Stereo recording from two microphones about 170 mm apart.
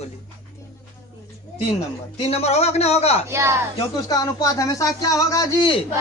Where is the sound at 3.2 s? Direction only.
15° right (ahead or behind).